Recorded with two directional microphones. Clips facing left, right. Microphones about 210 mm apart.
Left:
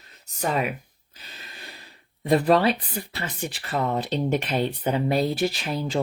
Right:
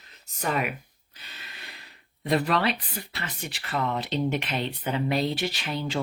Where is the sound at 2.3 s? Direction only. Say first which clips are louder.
Left 5 dB; 30° left (ahead or behind).